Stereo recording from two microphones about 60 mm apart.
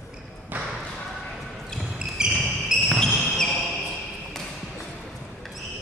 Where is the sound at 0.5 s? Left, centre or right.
Right.